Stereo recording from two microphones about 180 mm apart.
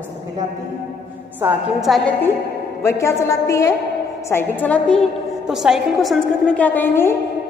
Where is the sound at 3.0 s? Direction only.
15° left (ahead or behind).